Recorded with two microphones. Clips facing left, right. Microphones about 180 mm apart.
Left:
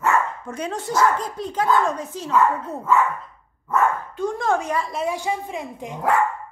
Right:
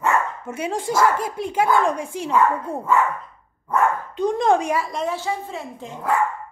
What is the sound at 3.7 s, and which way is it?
Dog, 15° right (ahead or behind).